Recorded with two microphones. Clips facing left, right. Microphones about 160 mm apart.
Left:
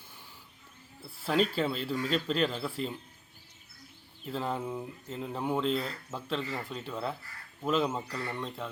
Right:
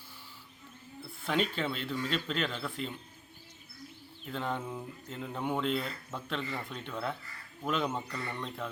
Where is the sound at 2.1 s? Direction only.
35° left (ahead or behind).